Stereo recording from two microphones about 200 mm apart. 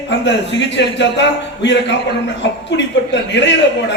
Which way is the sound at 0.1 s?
60° left (ahead or behind).